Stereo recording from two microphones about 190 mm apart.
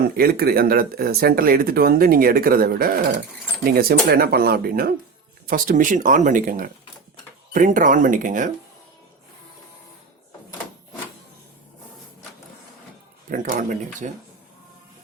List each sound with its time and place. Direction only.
0.2 s speech: 55° right (ahead or behind)
13.3 s speech: 45° right (ahead or behind)